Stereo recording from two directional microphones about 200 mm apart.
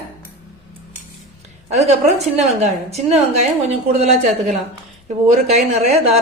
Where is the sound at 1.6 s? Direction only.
35° right (ahead or behind).